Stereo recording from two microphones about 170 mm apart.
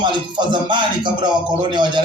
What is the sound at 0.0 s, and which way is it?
Music, 25° right (ahead or behind).